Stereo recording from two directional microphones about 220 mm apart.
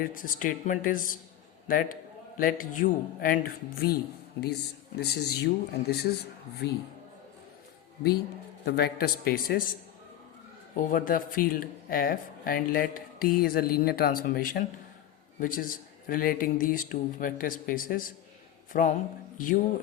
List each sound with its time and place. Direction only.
0.0 s a man's voice: 40° left (ahead or behind)
4.9 s speech: 45° left (ahead or behind)
8.6 s speech: 45° left (ahead or behind)
10.8 s speech: 40° left (ahead or behind)